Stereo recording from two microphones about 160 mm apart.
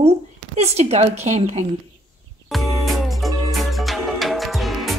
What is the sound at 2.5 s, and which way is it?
Music, centre (ahead or behind).